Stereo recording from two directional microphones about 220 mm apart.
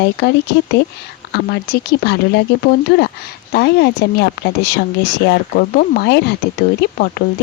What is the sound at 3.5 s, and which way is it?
Speech, 50° left (ahead or behind).